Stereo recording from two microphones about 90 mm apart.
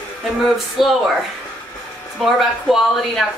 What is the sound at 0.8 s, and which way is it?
Speech, centre (ahead or behind).